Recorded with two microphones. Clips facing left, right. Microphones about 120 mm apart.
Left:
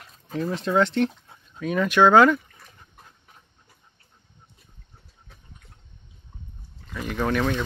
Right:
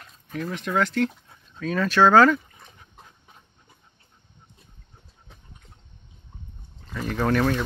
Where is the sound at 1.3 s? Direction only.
15° left (ahead or behind).